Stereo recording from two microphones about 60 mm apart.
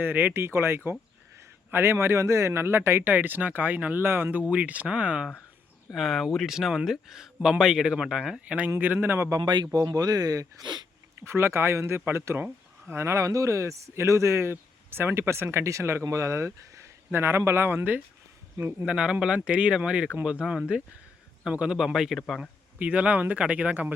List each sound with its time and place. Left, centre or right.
0.0 s speech: right
0.4 s speech: right
3.1 s speech: right
4.0 s speech: right; by 5.3 s centre
5.9 s a man's voice: centre
8.4 s speech: right
8.8 s speech: right
9.3 s speech: right
11.2 s speech: right
17.1 s speech: right
18.5 s speech: right
18.9 s a man's voice: centre
22.8 s speech: right